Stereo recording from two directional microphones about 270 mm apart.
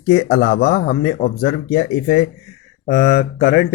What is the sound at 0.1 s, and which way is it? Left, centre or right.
Speech, left.